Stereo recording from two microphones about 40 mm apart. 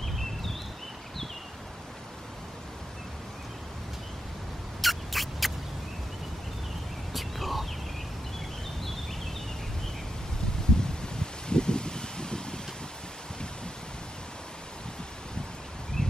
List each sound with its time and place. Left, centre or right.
4.8 s rodents: centre
7.1 s whispering: centre
10.8 s rustling leaves: centre
16.0 s a sound: centre